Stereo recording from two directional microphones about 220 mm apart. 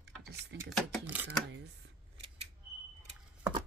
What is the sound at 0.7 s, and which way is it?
Speech, 5° right (ahead or behind).